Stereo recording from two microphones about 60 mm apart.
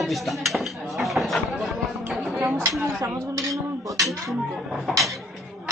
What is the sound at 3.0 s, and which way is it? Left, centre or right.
Speech, right.